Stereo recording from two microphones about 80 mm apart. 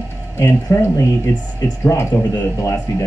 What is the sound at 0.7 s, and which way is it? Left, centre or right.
Speech, left.